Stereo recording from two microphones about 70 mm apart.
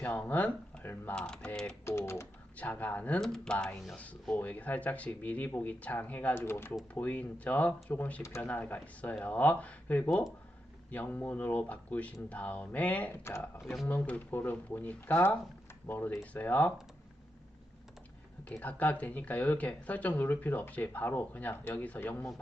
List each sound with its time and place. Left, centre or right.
0.0 s speech: left
1.1 s speech: centre
1.8 s speech: left
2.6 s speech: left
3.2 s speech: centre; by 6.3 s left
6.3 s speech: left
6.9 s speech: left
13.6 s speech: centre
13.8 s speech: left
18.6 s speech: left